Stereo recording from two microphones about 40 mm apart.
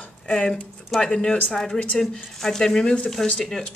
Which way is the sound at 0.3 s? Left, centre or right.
Centre.